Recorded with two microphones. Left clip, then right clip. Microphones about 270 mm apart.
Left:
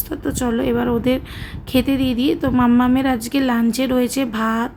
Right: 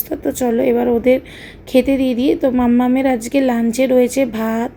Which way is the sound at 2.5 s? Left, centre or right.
Centre.